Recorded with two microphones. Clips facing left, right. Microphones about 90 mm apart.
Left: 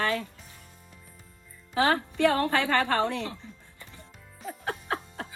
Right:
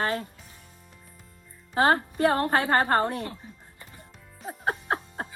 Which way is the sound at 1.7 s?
35° right (ahead or behind).